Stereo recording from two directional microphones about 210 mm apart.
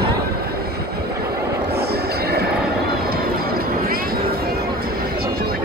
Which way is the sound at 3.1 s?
45° right (ahead or behind).